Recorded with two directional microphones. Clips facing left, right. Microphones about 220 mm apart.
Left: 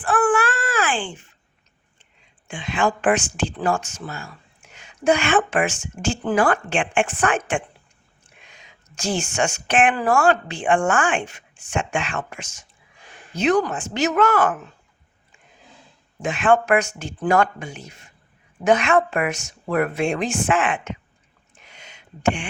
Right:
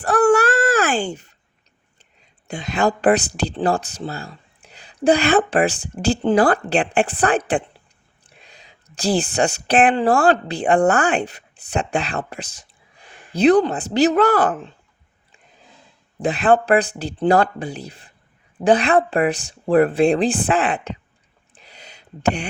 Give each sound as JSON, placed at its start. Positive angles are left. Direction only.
{"t": 0.0, "sound": "babbling", "side_deg": -40}
{"t": 2.5, "sound": "a woman's voice", "side_deg": -40}
{"t": 16.2, "sound": "speech", "side_deg": -35}
{"t": 21.5, "sound": "a sound", "side_deg": -35}